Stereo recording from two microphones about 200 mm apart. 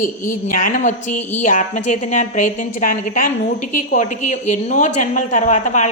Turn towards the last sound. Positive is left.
turn(degrees=35)  # may be behind; listen again after turning